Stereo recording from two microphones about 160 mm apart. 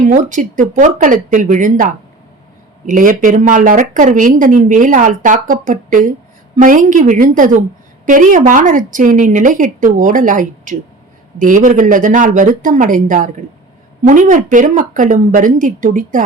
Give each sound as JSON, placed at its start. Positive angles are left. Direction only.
{"t": 0.0, "sound": "a woman's voice", "side_deg": -55}